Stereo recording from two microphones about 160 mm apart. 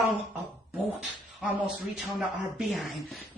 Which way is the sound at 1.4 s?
5° right (ahead or behind).